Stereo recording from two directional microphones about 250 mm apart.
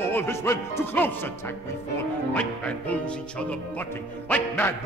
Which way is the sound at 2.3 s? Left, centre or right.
Centre.